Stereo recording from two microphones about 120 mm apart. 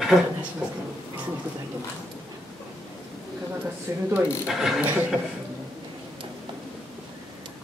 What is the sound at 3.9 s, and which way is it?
Speech, 25° right (ahead or behind).